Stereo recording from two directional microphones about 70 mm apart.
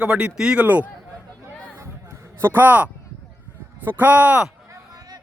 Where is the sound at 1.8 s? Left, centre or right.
Right.